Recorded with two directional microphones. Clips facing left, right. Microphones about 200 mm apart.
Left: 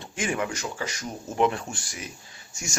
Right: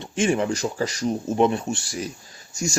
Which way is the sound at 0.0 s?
25° right (ahead or behind).